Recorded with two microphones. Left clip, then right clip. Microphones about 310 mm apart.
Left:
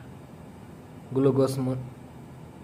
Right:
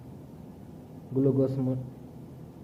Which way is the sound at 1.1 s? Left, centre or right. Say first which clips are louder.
Left 3 dB; left.